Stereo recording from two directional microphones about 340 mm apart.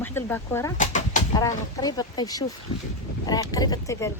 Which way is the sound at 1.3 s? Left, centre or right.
Centre.